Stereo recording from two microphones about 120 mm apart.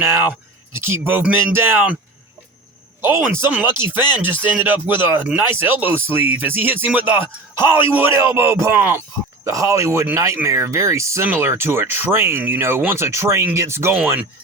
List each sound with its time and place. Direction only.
0.0 s speech: 20° right (ahead or behind)
3.0 s speech: 20° right (ahead or behind)
9.4 s speech: 25° right (ahead or behind)